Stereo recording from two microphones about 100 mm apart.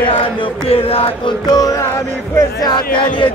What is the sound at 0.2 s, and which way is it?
Chant, 65° left (ahead or behind).